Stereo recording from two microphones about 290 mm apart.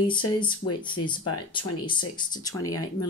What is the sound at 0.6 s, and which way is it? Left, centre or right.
Speech, left.